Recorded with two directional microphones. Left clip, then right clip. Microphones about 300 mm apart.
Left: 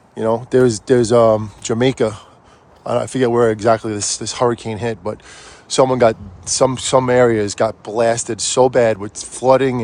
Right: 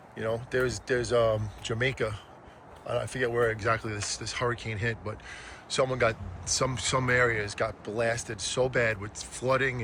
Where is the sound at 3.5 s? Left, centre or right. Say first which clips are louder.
Left 14 dB; centre.